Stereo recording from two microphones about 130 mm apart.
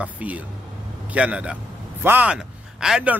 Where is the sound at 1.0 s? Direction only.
10° right (ahead or behind).